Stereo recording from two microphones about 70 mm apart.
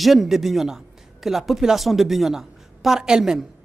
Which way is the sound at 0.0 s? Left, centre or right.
Centre.